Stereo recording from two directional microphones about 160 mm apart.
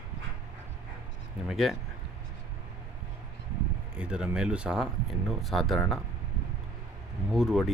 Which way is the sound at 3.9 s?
5° right (ahead or behind).